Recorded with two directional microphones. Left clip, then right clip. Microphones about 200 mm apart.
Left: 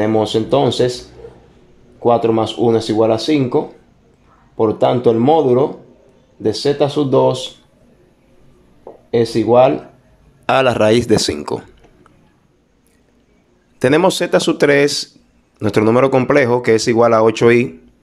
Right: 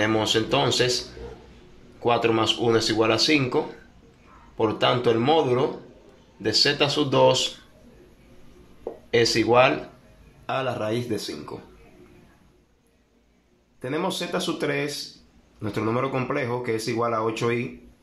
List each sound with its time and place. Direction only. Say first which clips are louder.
0.0 s speech: left 7 dB; 25° left (ahead or behind)
9.1 s speech: left 7 dB; 25° left (ahead or behind)
10.4 s speech: left 14 dB; 50° left (ahead or behind)
13.7 s speech: left 15 dB; 45° left (ahead or behind)